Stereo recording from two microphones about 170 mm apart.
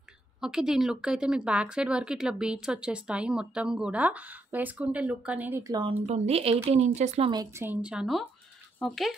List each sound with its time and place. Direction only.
0.4 s speech: 5° right (ahead or behind); by 5.9 s 20° right (ahead or behind)
5.9 s speech: 40° right (ahead or behind)
7.2 s speech: 20° right (ahead or behind)
7.6 s speech: 10° right (ahead or behind)